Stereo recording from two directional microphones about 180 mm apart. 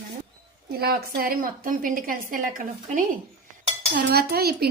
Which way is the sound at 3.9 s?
60° right (ahead or behind).